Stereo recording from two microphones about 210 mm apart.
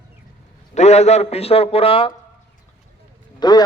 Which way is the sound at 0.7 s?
30° left (ahead or behind).